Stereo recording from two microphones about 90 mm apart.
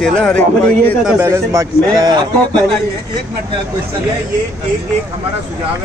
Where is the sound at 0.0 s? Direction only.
10° left (ahead or behind).